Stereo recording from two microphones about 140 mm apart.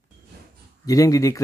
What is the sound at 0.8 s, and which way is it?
Speech, 25° left (ahead or behind).